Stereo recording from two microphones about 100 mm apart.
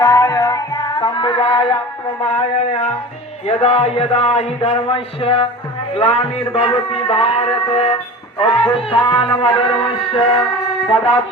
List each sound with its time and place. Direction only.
0.0 s music: 35° left (ahead or behind); by 1.8 s 60° left (ahead or behind)
2.2 s a man's voice: 75° left (ahead or behind)
3.4 s a man's voice: 90° left; by 7.9 s 70° left (ahead or behind)
8.4 s music: 65° left (ahead or behind)